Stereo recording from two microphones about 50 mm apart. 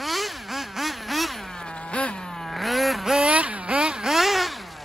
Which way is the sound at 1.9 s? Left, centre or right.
Left.